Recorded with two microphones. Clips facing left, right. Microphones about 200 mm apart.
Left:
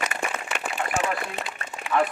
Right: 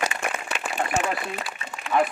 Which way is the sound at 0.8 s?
35° right (ahead or behind).